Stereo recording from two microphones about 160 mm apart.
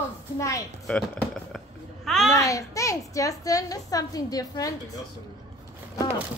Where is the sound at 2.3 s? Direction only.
20° left (ahead or behind).